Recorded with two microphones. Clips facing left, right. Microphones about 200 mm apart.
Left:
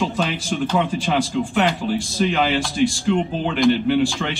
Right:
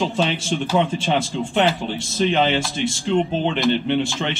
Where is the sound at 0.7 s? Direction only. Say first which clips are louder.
Right 1 dB; 25° right (ahead or behind).